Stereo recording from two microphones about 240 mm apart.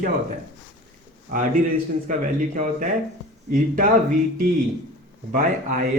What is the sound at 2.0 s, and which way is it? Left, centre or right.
Speech, right.